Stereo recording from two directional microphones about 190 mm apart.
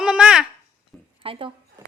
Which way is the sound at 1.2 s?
30° right (ahead or behind).